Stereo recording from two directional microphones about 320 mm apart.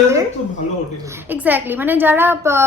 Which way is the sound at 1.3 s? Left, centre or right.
Centre.